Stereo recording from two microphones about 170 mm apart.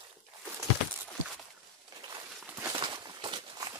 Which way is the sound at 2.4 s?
10° right (ahead or behind).